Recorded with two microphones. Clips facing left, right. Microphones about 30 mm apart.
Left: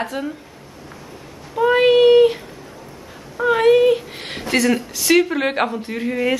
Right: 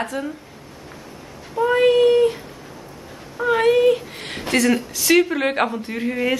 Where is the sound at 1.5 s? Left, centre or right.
Left.